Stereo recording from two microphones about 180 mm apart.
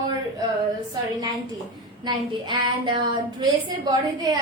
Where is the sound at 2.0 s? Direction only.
25° right (ahead or behind).